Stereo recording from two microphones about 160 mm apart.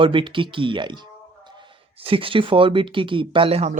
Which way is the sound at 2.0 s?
35° right (ahead or behind).